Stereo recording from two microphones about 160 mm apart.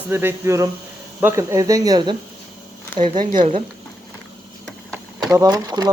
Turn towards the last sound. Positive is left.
turn(degrees=-20)  # may be behind; listen again after turning